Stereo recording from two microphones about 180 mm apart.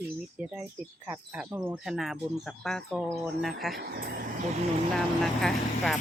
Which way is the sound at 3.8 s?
55° right (ahead or behind).